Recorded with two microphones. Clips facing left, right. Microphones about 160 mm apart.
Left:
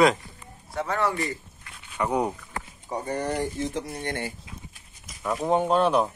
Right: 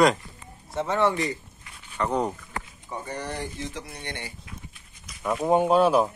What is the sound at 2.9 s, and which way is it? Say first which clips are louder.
Speech: left 5 dB; 45° left (ahead or behind).